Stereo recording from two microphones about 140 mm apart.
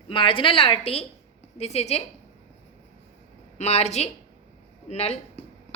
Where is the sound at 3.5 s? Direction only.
50° left (ahead or behind).